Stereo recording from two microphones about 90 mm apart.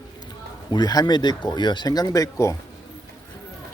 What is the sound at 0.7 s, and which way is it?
Speech, 50° left (ahead or behind).